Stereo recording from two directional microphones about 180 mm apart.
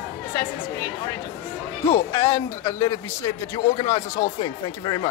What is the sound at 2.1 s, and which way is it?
A man's voice, 20° left (ahead or behind).